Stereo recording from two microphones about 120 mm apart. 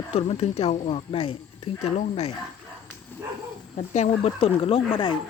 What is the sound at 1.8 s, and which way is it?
Speech, 65° left (ahead or behind).